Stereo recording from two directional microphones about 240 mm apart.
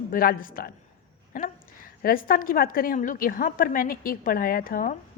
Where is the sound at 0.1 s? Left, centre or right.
Left.